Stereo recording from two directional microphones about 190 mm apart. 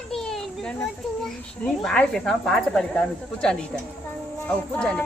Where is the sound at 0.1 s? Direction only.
Centre (ahead or behind).